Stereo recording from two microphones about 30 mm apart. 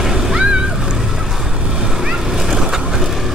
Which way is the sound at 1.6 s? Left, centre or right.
Right.